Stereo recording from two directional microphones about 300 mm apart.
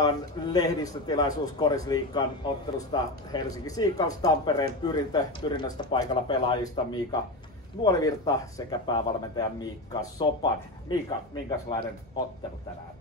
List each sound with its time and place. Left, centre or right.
0.0 s a man's voice: centre